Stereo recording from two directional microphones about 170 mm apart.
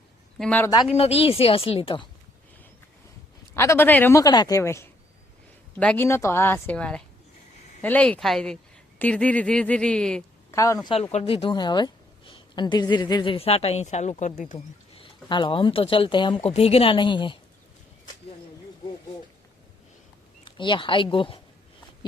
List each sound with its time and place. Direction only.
0.3 s speech: 5° left (ahead or behind)
0.6 s speech: 20° left (ahead or behind)
0.9 s a woman's voice: 35° left (ahead or behind)
3.5 s a man's voice: 15° left (ahead or behind)
6.1 s a man's voice: 15° left (ahead or behind)
10.5 s speech: 20° left (ahead or behind)
11.1 s a woman's voice: 35° left (ahead or behind)
14.9 s a woman's voice: 30° left (ahead or behind)
20.4 s speech: 30° left (ahead or behind)